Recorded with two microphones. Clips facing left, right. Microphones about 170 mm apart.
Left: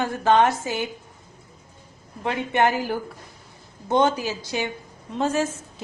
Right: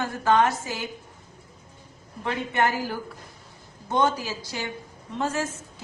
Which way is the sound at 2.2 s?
20° left (ahead or behind).